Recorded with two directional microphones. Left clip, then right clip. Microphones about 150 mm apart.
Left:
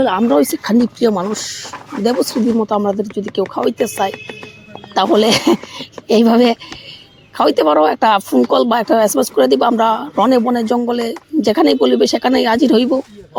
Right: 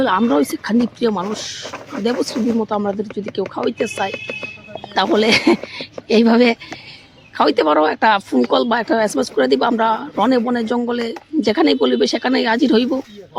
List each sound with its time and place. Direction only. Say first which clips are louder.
0.0 s speech: left 1 dB; 10° left (ahead or behind)
0.3 s speech: left 4 dB; 30° left (ahead or behind)